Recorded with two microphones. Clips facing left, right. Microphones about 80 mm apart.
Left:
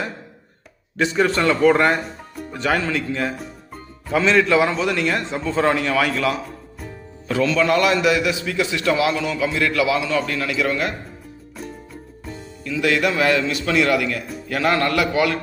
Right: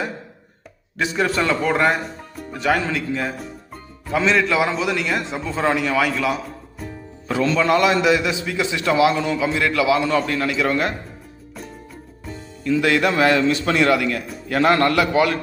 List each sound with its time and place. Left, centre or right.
0.9 s a man's voice: centre
7.3 s a man's voice: right
12.6 s a man's voice: right